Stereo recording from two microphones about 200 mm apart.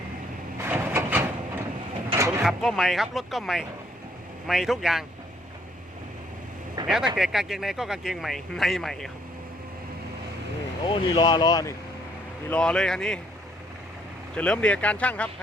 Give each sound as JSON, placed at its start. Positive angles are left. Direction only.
{"t": 0.6, "sound": "a sound", "side_deg": -10}
{"t": 2.4, "sound": "speech", "side_deg": 0}
{"t": 6.8, "sound": "speech", "side_deg": 0}
{"t": 10.8, "sound": "speech", "side_deg": 20}
{"t": 12.5, "sound": "speech", "side_deg": 5}
{"t": 14.3, "sound": "speech", "side_deg": 5}